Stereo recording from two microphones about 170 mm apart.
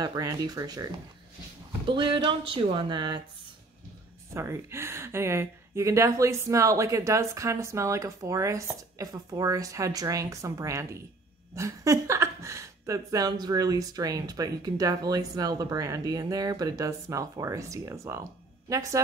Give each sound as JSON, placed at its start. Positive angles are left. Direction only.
{"t": 0.0, "sound": "speech", "side_deg": -20}
{"t": 1.9, "sound": "speech", "side_deg": -30}
{"t": 4.3, "sound": "speech", "side_deg": -15}